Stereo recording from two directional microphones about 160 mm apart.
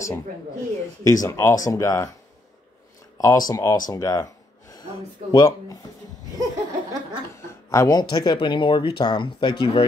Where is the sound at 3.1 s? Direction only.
20° left (ahead or behind).